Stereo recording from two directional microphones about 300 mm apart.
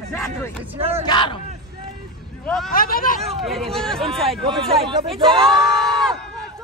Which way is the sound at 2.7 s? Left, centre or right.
Left.